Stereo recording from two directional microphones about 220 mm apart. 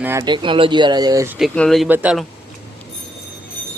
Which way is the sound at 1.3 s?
Centre (ahead or behind).